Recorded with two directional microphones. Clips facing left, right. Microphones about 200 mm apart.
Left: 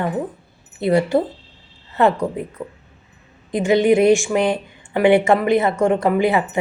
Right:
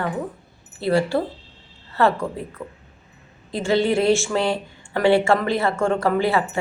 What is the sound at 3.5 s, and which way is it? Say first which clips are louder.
A woman's voice: left 5 dB; 15° left (ahead or behind).